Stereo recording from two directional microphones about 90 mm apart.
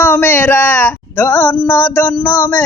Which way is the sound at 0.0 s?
25° left (ahead or behind).